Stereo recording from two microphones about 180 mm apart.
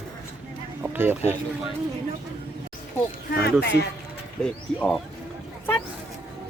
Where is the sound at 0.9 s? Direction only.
10° right (ahead or behind).